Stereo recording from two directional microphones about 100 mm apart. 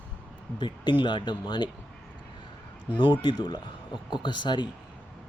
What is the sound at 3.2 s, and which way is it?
Speech, 45° left (ahead or behind).